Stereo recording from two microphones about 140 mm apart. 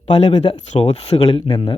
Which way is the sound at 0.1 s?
50° left (ahead or behind).